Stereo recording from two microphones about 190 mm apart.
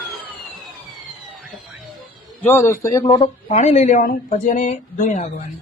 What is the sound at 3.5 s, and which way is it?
Speech, 40° left (ahead or behind).